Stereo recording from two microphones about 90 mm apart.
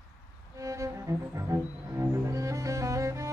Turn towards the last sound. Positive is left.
turn(degrees=-35)  # may be behind; listen again after turning